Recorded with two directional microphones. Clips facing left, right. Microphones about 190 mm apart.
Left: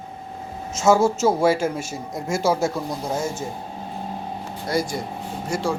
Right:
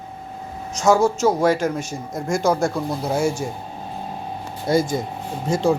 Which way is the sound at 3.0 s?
10° right (ahead or behind).